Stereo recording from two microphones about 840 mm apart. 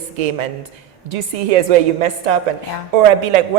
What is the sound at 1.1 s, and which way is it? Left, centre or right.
A man's voice, right.